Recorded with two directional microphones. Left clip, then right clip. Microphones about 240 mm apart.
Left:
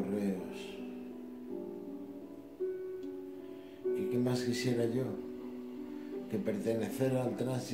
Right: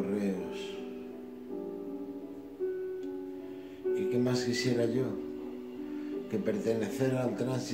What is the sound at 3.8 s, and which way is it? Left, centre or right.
Music, left.